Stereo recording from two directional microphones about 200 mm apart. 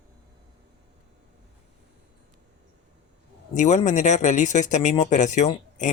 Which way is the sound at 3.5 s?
35° left (ahead or behind).